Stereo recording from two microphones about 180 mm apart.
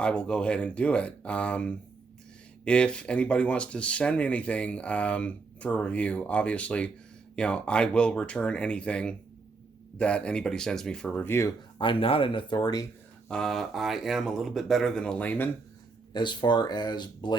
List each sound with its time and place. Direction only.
0.0 s speech: 5° left (ahead or behind)
11.8 s speech: 30° left (ahead or behind)
13.2 s speech: 5° left (ahead or behind)
16.1 s speech: 25° left (ahead or behind)